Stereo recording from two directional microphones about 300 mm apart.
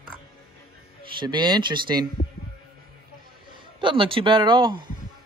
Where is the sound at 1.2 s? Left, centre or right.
Centre.